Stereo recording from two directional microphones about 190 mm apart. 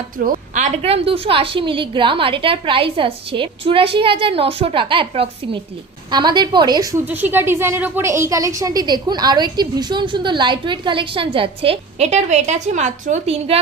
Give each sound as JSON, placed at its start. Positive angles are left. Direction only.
{"t": 0.2, "sound": "a woman's voice", "side_deg": -45}